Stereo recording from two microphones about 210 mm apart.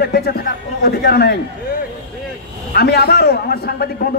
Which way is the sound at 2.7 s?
50° left (ahead or behind).